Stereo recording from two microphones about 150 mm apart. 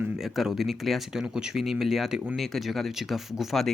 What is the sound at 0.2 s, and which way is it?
Speech, centre (ahead or behind).